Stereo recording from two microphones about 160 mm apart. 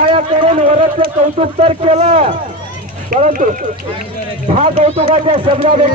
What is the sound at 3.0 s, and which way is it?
Speech, 55° right (ahead or behind).